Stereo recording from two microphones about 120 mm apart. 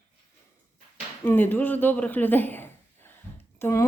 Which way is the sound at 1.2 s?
15° left (ahead or behind).